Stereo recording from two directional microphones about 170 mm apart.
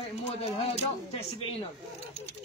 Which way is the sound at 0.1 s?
40° left (ahead or behind).